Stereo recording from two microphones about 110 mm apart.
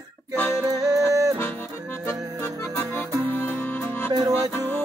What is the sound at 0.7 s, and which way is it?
Music, 30° right (ahead or behind).